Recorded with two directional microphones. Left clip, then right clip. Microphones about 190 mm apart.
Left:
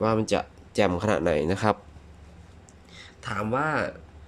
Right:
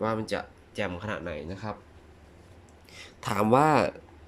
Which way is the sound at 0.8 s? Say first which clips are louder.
Left 9 dB; 25° left (ahead or behind).